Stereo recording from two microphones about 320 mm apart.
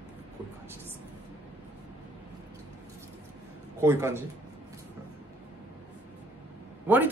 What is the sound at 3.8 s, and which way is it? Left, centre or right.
Speech, centre.